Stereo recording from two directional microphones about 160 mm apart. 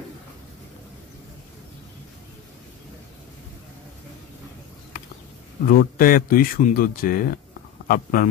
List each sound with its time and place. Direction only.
5.7 s speech: 65° left (ahead or behind)